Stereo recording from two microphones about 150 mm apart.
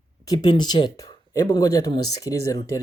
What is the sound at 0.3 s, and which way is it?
Speech, 30° left (ahead or behind).